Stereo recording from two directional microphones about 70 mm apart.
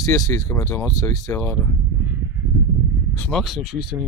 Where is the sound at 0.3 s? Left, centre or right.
Left.